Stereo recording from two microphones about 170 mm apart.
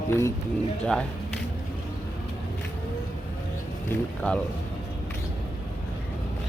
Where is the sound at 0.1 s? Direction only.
15° left (ahead or behind).